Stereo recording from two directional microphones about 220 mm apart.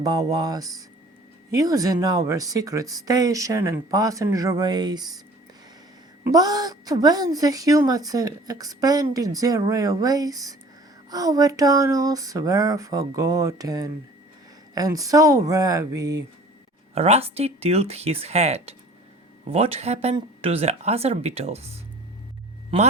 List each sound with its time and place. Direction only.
0.0 s a woman's voice: 15° right (ahead or behind)
6.2 s a woman's voice: 15° right (ahead or behind)
16.9 s speech: 25° right (ahead or behind)